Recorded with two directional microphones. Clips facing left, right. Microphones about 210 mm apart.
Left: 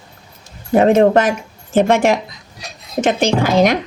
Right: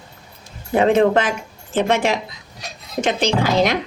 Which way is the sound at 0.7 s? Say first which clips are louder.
Left 4 dB; 45° left (ahead or behind).